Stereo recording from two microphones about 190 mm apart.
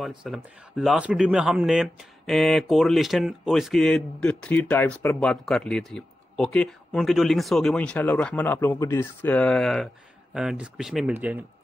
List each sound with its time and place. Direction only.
0.0 s speech: centre (ahead or behind)